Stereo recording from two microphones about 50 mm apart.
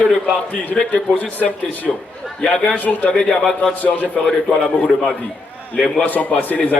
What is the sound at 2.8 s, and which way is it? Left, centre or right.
Speech, left.